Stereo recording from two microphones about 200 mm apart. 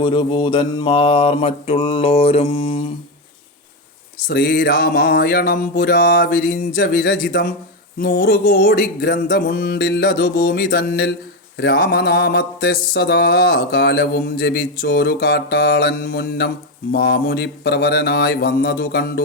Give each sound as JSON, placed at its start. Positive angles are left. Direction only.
{"t": 0.0, "sound": "mantra", "side_deg": 25}
{"t": 4.3, "sound": "music", "side_deg": 50}
{"t": 7.9, "sound": "mantra", "side_deg": 50}